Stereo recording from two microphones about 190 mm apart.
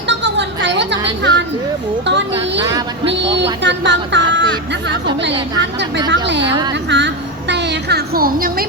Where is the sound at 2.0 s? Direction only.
70° right (ahead or behind).